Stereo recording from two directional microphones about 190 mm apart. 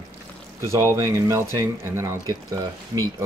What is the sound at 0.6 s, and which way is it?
Speech, 15° right (ahead or behind).